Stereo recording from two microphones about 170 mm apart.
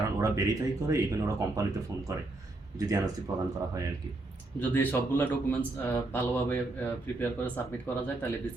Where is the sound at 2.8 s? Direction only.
20° right (ahead or behind).